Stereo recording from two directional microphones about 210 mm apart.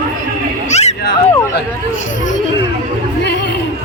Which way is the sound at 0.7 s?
30° left (ahead or behind).